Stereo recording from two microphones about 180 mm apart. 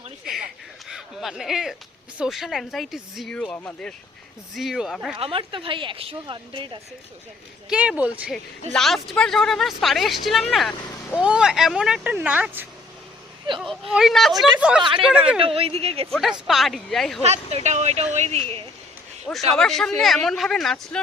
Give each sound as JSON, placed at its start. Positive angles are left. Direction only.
{"t": 0.9, "sound": "a sound", "side_deg": 0}
{"t": 2.1, "sound": "speech", "side_deg": -5}
{"t": 5.1, "sound": "a woman's voice", "side_deg": -30}
{"t": 7.7, "sound": "speech", "side_deg": -5}
{"t": 15.4, "sound": "speech", "side_deg": -30}
{"t": 16.5, "sound": "speech", "side_deg": 0}
{"t": 17.2, "sound": "speech", "side_deg": -35}
{"t": 19.3, "sound": "speech", "side_deg": 0}